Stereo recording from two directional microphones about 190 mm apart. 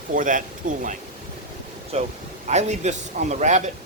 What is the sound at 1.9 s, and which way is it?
A man's voice, 30° right (ahead or behind).